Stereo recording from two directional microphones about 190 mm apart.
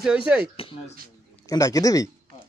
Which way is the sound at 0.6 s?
30° left (ahead or behind).